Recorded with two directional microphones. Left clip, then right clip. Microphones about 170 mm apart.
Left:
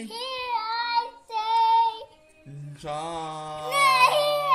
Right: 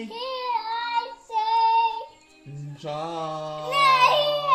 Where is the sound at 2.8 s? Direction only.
15° left (ahead or behind).